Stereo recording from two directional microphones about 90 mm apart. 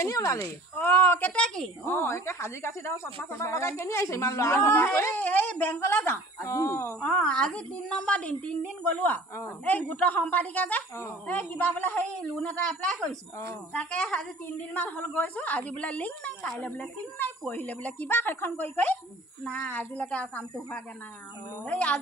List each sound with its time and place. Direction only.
0.0 s speech: 35° left (ahead or behind)
0.7 s speech: 25° left (ahead or behind)
1.3 s speech: 10° left (ahead or behind)
1.9 s speech: 25° left (ahead or behind)
7.0 s speech: 10° left (ahead or behind)
21.6 s speech: 15° left (ahead or behind)